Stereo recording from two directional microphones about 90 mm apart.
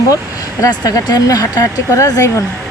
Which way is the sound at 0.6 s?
45° left (ahead or behind).